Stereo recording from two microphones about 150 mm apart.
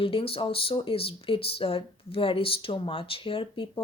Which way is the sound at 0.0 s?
40° left (ahead or behind).